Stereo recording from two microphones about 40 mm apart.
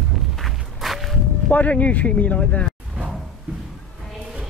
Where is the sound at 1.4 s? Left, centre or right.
Left.